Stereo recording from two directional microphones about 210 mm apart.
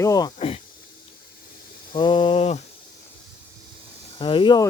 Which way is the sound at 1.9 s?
20° left (ahead or behind).